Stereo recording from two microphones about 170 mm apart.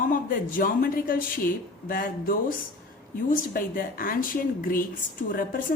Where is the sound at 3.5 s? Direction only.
55° left (ahead or behind).